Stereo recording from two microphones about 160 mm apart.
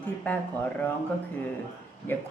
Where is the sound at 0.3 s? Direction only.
10° left (ahead or behind).